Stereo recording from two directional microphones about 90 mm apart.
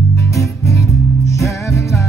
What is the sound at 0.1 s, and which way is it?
Music, 35° left (ahead or behind).